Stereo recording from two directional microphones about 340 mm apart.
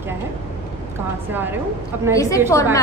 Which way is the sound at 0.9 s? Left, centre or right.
Centre.